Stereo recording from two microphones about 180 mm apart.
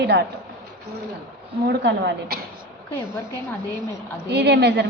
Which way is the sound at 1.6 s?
65° right (ahead or behind).